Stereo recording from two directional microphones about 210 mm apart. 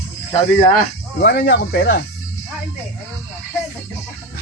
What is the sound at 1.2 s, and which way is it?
Speech, 50° left (ahead or behind).